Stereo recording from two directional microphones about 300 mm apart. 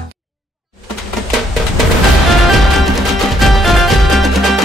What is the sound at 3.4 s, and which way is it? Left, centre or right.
Music, centre.